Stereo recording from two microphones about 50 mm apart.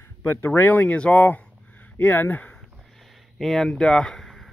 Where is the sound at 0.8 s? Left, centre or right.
Left.